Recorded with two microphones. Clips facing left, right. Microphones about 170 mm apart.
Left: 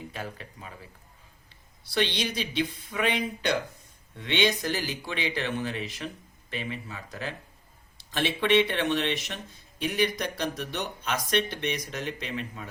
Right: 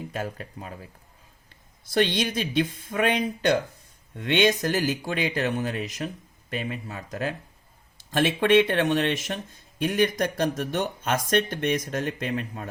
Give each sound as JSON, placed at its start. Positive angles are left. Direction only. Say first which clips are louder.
{"t": 0.1, "sound": "speech", "louder": "right 6 dB", "side_deg": -45}